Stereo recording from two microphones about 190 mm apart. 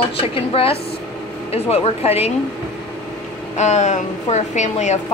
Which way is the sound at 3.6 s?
35° left (ahead or behind).